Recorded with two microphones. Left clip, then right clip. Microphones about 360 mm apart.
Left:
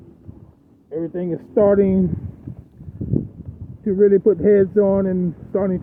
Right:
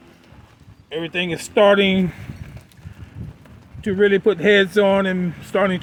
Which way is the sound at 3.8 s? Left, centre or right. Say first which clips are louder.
Left 2 dB; centre.